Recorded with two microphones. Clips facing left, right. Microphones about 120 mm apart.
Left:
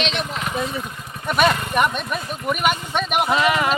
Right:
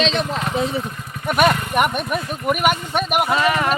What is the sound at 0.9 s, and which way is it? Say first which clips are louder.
Vehicle: right 2 dB; 15° left (ahead or behind).